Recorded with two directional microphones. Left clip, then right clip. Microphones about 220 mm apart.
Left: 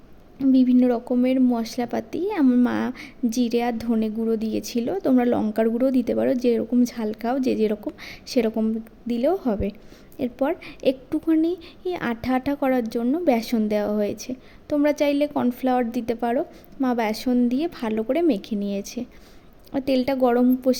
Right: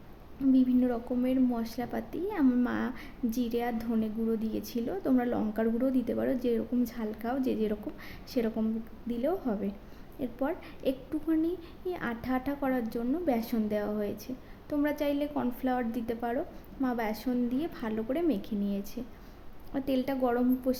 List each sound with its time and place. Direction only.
0.5 s a woman's voice: 30° left (ahead or behind)